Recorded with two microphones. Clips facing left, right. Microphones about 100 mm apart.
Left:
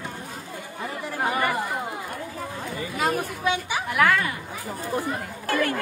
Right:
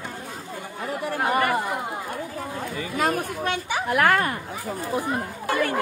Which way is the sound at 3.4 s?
45° right (ahead or behind).